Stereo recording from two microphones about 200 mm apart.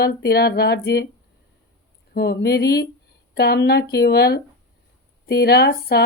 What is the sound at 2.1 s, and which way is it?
Speech, 55° left (ahead or behind).